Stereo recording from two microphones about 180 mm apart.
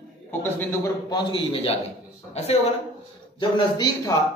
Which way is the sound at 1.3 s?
30° left (ahead or behind).